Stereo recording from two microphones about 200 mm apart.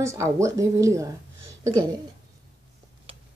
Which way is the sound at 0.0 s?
15° right (ahead or behind).